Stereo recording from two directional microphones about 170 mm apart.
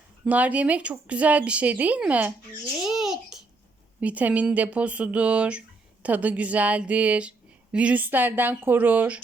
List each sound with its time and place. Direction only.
0.3 s speech: 10° right (ahead or behind)
2.8 s babbling: centre (ahead or behind)
4.0 s speech: 10° right (ahead or behind)